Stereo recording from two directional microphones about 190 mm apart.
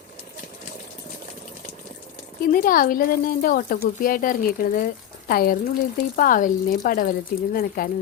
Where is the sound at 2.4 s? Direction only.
50° left (ahead or behind).